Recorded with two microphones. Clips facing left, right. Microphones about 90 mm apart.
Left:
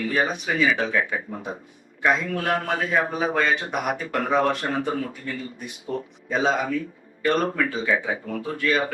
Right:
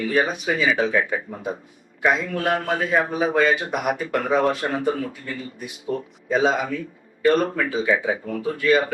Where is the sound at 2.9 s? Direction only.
5° right (ahead or behind).